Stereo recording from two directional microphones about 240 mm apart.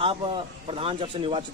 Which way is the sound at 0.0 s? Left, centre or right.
Right.